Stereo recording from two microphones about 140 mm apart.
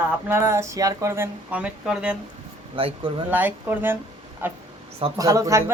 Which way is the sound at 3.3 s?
15° right (ahead or behind).